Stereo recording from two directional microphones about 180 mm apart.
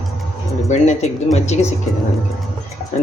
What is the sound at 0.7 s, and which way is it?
Speech, 40° left (ahead or behind).